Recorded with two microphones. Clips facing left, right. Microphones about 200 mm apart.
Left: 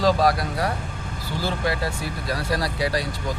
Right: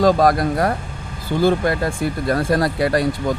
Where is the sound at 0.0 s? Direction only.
50° right (ahead or behind).